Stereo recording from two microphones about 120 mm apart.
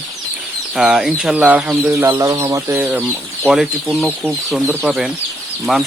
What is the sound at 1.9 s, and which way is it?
Speech, 20° right (ahead or behind).